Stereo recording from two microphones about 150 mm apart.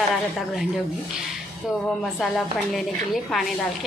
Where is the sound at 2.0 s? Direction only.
Centre (ahead or behind).